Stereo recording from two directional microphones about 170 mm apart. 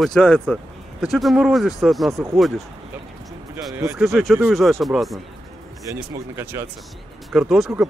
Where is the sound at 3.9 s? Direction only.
Centre (ahead or behind).